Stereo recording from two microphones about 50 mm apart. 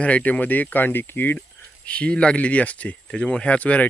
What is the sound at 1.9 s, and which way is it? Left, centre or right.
Speech, left.